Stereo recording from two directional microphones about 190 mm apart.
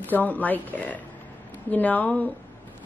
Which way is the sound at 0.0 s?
10° left (ahead or behind).